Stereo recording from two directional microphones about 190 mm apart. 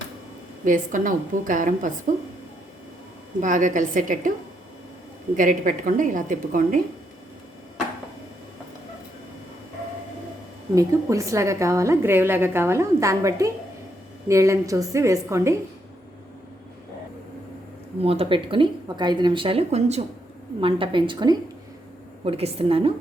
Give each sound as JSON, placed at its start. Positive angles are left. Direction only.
{"t": 0.6, "sound": "a woman's voice", "side_deg": -45}
{"t": 3.4, "sound": "a woman's voice", "side_deg": -40}
{"t": 5.4, "sound": "a woman's voice", "side_deg": -45}
{"t": 10.8, "sound": "a woman's voice", "side_deg": -15}
{"t": 18.0, "sound": "a woman's voice", "side_deg": -30}